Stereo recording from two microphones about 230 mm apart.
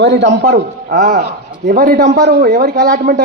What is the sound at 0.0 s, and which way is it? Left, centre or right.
Speech, right.